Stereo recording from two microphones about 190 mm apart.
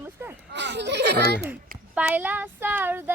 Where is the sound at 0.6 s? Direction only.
65° right (ahead or behind).